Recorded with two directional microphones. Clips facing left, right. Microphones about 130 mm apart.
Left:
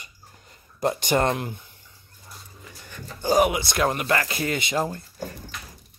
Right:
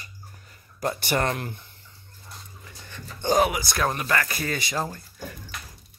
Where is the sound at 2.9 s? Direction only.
10° left (ahead or behind).